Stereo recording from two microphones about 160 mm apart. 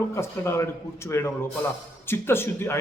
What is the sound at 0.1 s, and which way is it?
A man's voice, 15° left (ahead or behind).